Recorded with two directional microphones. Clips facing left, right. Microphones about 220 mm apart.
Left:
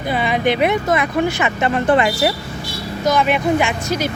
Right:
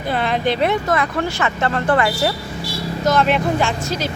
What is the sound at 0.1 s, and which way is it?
Speech, 10° left (ahead or behind).